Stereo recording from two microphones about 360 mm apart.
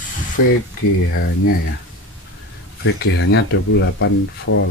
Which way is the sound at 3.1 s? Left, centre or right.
Left.